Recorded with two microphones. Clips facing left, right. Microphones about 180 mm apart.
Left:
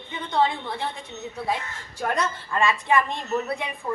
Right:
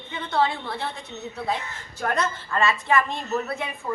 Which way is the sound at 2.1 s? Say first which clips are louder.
Even; 15° left (ahead or behind).